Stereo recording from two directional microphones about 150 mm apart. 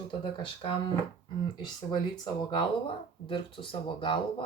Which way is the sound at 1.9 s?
30° left (ahead or behind).